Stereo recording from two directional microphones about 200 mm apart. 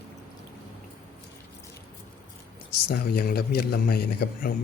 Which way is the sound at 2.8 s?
50° left (ahead or behind).